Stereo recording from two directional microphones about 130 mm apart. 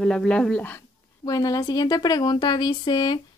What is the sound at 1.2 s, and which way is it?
A woman's voice, 30° left (ahead or behind).